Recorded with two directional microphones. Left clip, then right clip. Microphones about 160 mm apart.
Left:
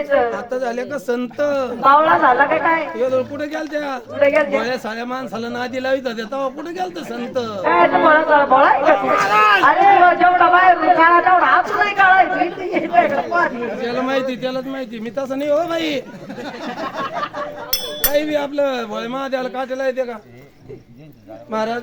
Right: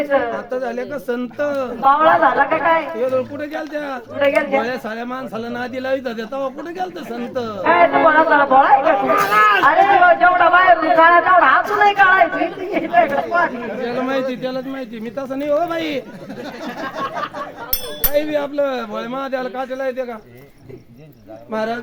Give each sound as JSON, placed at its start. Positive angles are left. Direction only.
{"t": 0.3, "sound": "a man's voice", "side_deg": 40}
{"t": 1.9, "sound": "a man's voice", "side_deg": -35}
{"t": 3.0, "sound": "a man's voice", "side_deg": 40}
{"t": 4.2, "sound": "a man's voice", "side_deg": -30}
{"t": 4.5, "sound": "a man's voice", "side_deg": 40}
{"t": 7.6, "sound": "a man's voice", "side_deg": -35}
{"t": 8.8, "sound": "a man's voice", "side_deg": 35}
{"t": 10.1, "sound": "a man's voice", "side_deg": -35}
{"t": 13.7, "sound": "a man's voice", "side_deg": 45}
{"t": 16.6, "sound": "a sound", "side_deg": 5}
{"t": 18.1, "sound": "a man's voice", "side_deg": 45}
{"t": 21.5, "sound": "speech", "side_deg": 20}